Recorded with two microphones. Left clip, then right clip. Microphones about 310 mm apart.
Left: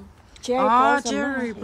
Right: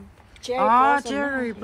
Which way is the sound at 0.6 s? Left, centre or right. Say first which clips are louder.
Even; centre.